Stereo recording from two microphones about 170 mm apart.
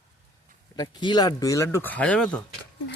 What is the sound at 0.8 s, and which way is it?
Speech, 25° left (ahead or behind).